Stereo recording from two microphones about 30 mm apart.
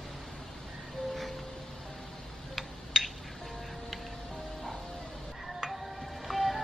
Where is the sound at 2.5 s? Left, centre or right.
Centre.